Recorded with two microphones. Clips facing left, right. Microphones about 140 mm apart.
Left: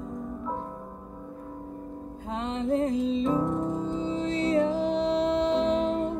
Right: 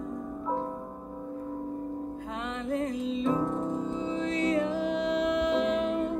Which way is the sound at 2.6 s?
30° left (ahead or behind).